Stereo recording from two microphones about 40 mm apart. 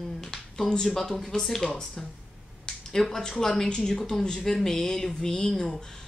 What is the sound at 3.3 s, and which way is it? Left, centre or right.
Speech, centre.